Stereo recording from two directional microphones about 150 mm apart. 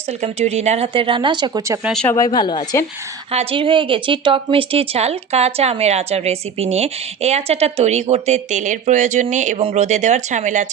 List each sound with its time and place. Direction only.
0.2 s speech: 45° right (ahead or behind); by 1.8 s 25° right (ahead or behind)
1.8 s speech: centre (ahead or behind)
2.0 s speech: 25° left (ahead or behind)
3.3 s speech: 35° right (ahead or behind); by 10.7 s 55° right (ahead or behind)